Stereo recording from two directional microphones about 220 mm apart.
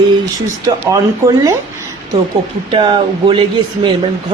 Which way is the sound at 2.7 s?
20° right (ahead or behind).